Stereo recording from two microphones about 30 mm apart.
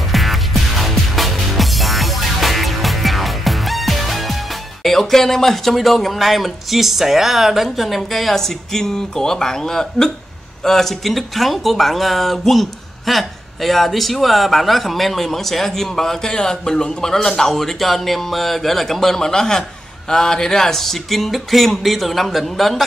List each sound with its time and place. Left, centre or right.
0.1 s music: centre
4.8 s speech: centre